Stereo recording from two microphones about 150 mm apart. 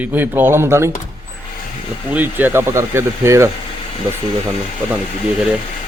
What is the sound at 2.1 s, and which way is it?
A man's voice, 10° right (ahead or behind).